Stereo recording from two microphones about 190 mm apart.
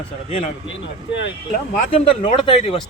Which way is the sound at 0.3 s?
35° left (ahead or behind).